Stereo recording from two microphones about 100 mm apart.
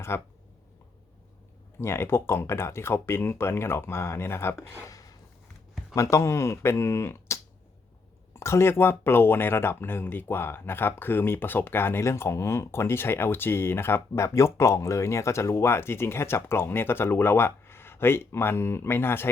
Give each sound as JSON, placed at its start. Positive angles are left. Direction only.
{"t": 0.1, "sound": "speech", "side_deg": 25}
{"t": 1.8, "sound": "speech", "side_deg": 25}
{"t": 4.8, "sound": "a sound", "side_deg": 35}
{"t": 5.9, "sound": "speech", "side_deg": 30}